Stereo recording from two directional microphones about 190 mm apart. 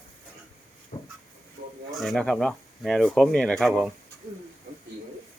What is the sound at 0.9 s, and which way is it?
Train, 30° left (ahead or behind).